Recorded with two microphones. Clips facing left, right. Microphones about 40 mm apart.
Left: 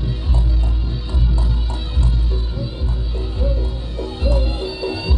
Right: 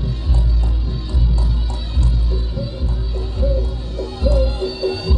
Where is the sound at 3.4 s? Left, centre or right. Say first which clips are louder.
Right 4 dB; left.